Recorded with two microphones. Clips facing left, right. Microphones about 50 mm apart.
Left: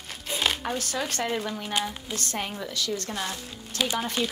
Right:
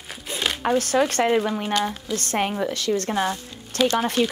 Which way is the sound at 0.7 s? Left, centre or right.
Right.